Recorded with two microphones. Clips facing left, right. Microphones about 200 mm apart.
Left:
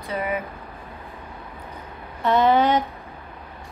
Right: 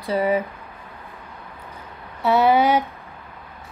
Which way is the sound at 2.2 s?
10° right (ahead or behind).